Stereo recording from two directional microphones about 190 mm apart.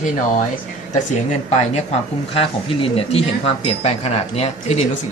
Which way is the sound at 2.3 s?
30° left (ahead or behind).